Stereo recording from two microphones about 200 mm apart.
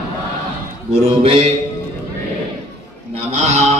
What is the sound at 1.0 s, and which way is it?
Speech, 30° right (ahead or behind).